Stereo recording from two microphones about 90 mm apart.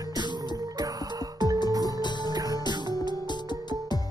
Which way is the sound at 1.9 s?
55° left (ahead or behind).